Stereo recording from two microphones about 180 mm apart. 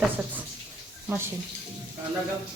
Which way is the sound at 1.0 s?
15° right (ahead or behind).